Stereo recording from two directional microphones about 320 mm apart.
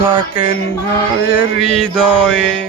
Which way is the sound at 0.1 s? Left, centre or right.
Centre.